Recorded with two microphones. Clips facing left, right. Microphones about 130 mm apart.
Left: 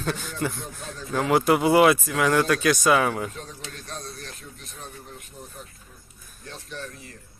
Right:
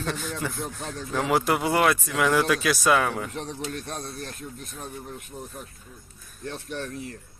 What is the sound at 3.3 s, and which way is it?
Speech, 70° right (ahead or behind).